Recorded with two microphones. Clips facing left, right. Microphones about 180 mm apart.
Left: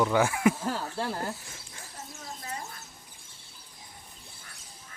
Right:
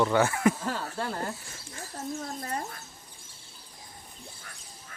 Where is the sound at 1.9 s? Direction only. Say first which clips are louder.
Right 9 dB; 55° right (ahead or behind).